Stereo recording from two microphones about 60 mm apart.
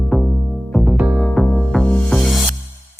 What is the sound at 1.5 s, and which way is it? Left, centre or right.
Music, centre.